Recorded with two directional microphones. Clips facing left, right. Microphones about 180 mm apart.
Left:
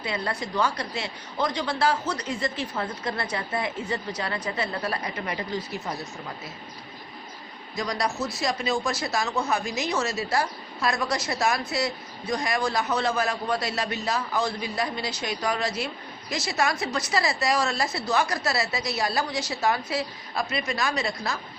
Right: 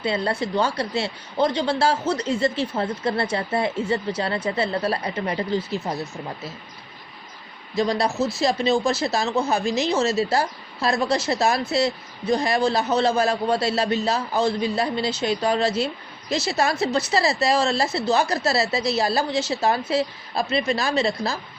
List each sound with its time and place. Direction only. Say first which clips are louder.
0.0 s speech: right 6 dB; 30° right (ahead or behind)
7.8 s speech: right 6 dB; 30° right (ahead or behind)